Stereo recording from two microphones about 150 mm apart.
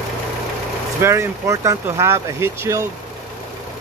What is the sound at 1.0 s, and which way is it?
Speech, 20° right (ahead or behind).